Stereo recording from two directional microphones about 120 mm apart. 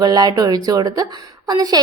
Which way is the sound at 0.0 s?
30° right (ahead or behind).